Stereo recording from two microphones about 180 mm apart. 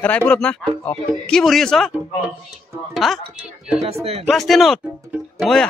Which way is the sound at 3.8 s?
35° right (ahead or behind).